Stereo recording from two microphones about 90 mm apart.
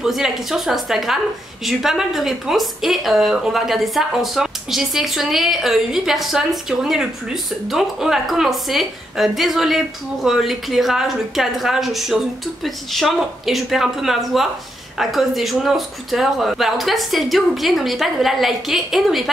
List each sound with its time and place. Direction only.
0.0 s a woman's voice: 5° right (ahead or behind)